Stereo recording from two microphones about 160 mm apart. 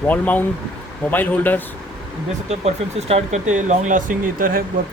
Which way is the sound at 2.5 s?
40° right (ahead or behind).